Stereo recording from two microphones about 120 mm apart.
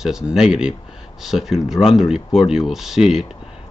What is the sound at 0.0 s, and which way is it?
Speech, 5° right (ahead or behind).